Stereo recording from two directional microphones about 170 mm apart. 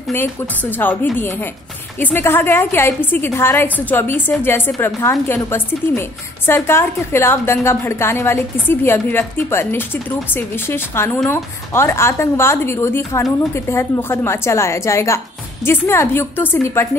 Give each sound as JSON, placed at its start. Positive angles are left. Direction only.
{"t": 0.1, "sound": "a woman's voice", "side_deg": 10}